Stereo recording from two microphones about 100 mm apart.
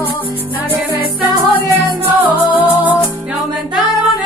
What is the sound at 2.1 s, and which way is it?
Music, 15° right (ahead or behind).